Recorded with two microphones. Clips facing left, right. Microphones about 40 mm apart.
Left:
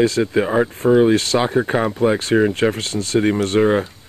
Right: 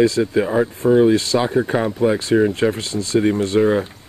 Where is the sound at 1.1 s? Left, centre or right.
Left.